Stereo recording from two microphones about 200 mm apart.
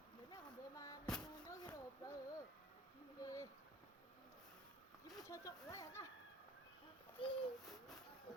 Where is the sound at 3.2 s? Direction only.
15° left (ahead or behind).